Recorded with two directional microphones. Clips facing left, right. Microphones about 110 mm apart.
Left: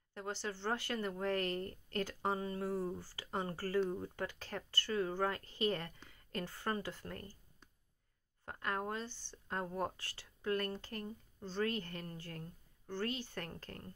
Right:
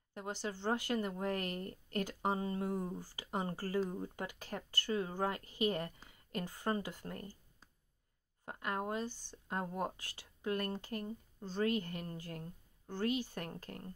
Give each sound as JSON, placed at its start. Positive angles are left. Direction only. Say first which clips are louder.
{"t": 0.1, "sound": "a woman's voice", "louder": "right 1 dB", "side_deg": -15}